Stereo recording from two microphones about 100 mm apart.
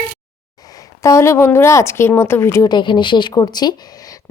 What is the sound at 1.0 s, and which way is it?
A woman's voice, 30° left (ahead or behind).